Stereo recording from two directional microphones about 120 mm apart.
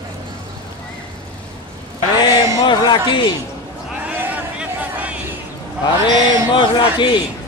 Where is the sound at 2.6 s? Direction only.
35° left (ahead or behind).